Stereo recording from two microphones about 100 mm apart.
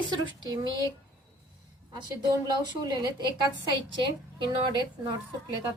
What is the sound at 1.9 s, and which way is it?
A woman's voice, 40° right (ahead or behind).